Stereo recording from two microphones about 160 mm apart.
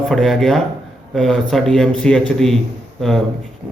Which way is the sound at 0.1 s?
Centre (ahead or behind).